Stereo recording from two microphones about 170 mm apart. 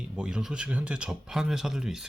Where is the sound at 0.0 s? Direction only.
5° right (ahead or behind).